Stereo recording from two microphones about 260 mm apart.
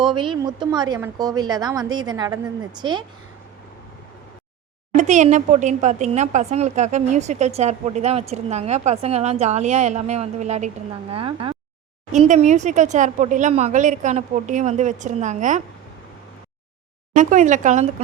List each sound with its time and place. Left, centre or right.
0.0 s a woman's voice: centre
4.9 s speech: right
17.2 s speech: right